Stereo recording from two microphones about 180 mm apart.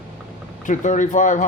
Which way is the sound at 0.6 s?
45° left (ahead or behind).